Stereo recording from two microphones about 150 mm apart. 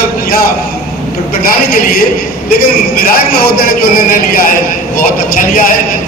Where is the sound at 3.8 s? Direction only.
75° left (ahead or behind).